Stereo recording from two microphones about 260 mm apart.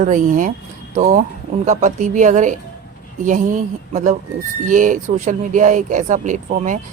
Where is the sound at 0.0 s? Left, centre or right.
Right.